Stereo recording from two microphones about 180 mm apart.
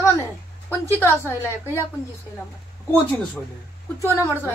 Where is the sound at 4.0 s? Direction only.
15° left (ahead or behind).